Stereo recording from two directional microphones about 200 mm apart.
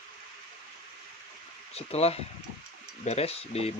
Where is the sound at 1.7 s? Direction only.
30° left (ahead or behind).